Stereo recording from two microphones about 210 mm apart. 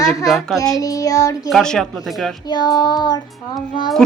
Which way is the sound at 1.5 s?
Centre (ahead or behind).